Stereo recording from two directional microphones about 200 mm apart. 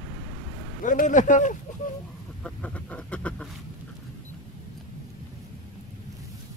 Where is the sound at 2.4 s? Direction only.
5° left (ahead or behind).